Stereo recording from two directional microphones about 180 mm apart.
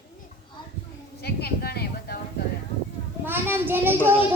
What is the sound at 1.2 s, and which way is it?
Speech, 60° left (ahead or behind).